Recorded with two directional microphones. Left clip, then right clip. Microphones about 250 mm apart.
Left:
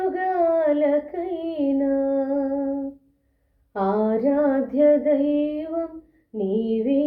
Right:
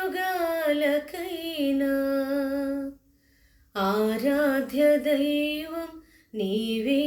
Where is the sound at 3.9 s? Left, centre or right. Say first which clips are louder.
Left 4 dB; right.